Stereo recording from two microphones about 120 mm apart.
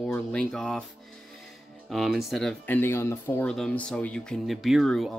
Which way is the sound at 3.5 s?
5° left (ahead or behind).